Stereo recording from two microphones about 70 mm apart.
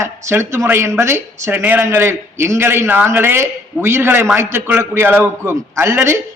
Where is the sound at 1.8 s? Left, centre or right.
Right.